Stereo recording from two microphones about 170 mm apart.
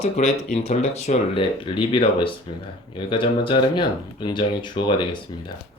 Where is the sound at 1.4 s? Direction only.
30° left (ahead or behind).